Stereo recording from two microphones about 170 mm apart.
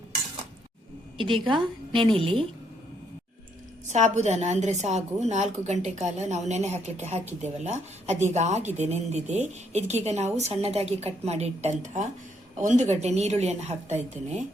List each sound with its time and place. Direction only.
1.2 s a woman's voice: 30° right (ahead or behind)
3.8 s a woman's voice: 45° right (ahead or behind)